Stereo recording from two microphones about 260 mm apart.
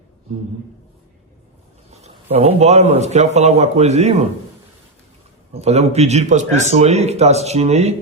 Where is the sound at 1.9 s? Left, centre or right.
Right.